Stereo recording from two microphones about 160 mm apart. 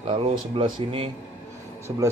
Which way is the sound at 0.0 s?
35° right (ahead or behind).